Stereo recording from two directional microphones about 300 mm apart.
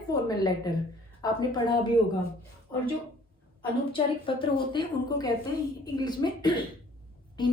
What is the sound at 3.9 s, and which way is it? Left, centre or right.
A woman's voice, centre.